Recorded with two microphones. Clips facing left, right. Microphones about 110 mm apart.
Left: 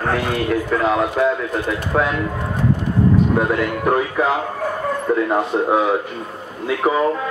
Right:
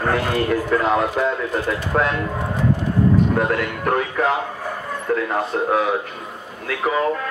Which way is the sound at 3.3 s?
10° left (ahead or behind).